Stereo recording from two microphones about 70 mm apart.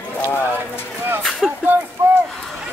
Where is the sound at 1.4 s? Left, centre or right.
Centre.